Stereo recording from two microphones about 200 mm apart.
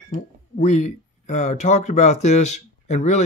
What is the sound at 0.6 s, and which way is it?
Speech, 35° left (ahead or behind).